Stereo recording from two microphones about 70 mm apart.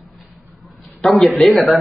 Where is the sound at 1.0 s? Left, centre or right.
Centre.